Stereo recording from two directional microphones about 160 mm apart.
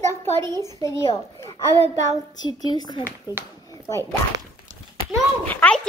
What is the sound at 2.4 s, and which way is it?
Speech, 25° left (ahead or behind).